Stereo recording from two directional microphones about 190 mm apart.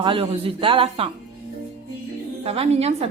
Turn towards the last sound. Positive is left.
turn(degrees=-35)  # may be behind; listen again after turning